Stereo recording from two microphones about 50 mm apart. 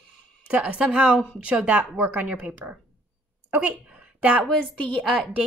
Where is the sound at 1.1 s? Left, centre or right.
Left.